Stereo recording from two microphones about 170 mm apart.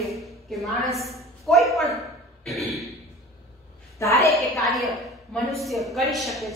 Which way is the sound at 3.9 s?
15° left (ahead or behind).